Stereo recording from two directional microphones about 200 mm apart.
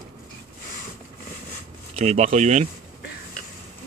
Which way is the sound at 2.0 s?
35° right (ahead or behind).